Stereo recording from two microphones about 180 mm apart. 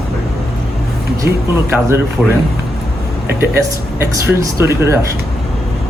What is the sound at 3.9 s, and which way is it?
Speech, 15° right (ahead or behind).